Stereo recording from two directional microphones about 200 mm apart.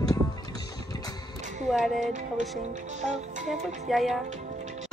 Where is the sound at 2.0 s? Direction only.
40° right (ahead or behind).